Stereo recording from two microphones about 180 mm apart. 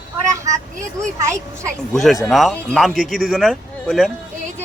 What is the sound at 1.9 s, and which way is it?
A man's voice, centre (ahead or behind).